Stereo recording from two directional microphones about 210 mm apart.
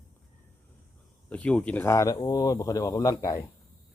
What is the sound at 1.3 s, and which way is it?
Speech, 5° left (ahead or behind).